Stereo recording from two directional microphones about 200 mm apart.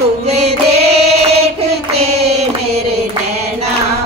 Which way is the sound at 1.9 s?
30° right (ahead or behind).